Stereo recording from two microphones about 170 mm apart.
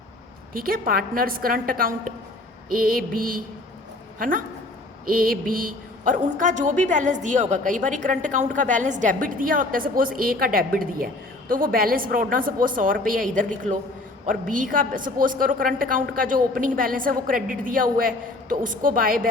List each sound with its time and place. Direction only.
0.5 s a woman's voice: 60° right (ahead or behind)